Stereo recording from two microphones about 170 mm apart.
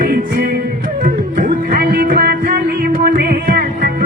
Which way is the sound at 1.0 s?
50° right (ahead or behind).